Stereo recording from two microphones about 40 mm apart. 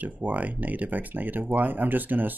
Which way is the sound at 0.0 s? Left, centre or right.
Right.